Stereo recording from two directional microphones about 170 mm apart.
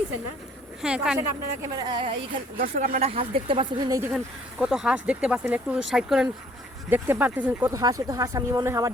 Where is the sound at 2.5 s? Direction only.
45° right (ahead or behind); by 4.1 s 20° right (ahead or behind).